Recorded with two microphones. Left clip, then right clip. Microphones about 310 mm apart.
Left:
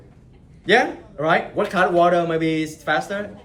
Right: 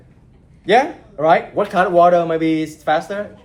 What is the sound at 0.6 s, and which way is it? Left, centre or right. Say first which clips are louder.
Speech: right 3 dB; centre.